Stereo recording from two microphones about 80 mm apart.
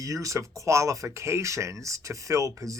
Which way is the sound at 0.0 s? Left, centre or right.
Right.